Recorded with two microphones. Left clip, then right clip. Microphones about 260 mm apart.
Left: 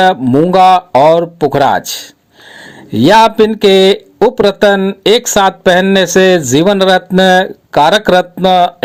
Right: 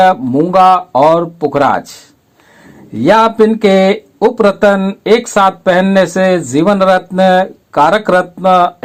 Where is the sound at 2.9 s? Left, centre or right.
Left.